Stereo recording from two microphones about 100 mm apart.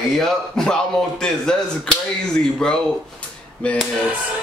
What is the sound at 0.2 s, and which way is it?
A man's voice, 5° left (ahead or behind).